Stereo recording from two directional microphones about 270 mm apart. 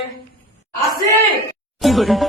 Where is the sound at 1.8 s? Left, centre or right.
Centre.